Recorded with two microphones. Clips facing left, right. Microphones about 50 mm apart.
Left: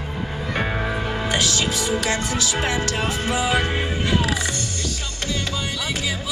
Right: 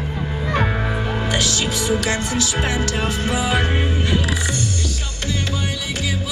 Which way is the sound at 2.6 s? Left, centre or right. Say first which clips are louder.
Right 1 dB; left.